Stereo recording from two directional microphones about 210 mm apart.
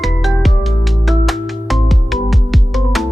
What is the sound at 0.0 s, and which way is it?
Music, centre (ahead or behind).